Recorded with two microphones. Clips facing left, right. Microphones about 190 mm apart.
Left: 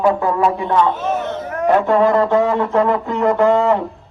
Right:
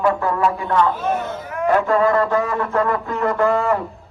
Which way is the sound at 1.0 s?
Centre (ahead or behind).